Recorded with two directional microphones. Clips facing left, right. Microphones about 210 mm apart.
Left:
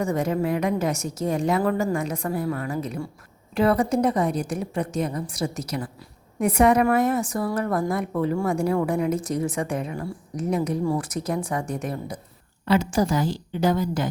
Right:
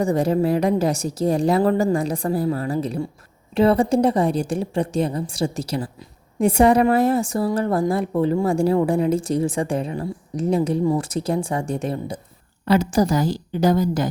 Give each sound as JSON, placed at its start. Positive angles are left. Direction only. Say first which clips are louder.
{"t": 0.0, "sound": "a woman's voice", "louder": "right 5 dB", "side_deg": -30}
{"t": 12.6, "sound": "a woman's voice", "louder": "right 3 dB", "side_deg": -40}